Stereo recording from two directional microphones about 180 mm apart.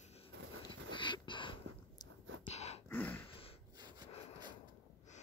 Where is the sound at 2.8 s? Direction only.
10° left (ahead or behind).